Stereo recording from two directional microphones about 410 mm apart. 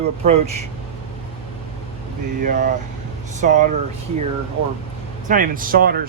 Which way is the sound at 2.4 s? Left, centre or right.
Centre.